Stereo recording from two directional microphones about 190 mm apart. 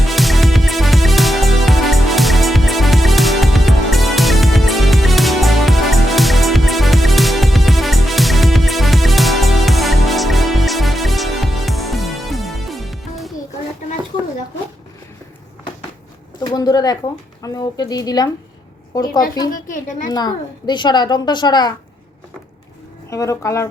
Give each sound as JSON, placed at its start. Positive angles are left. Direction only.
{"t": 0.0, "sound": "music", "side_deg": 0}
{"t": 16.4, "sound": "a sound", "side_deg": 20}
{"t": 17.4, "sound": "a child's voice", "side_deg": 20}
{"t": 19.5, "sound": "a child's voice", "side_deg": 45}
{"t": 20.1, "sound": "a child's voice", "side_deg": 20}
{"t": 23.0, "sound": "speech", "side_deg": 15}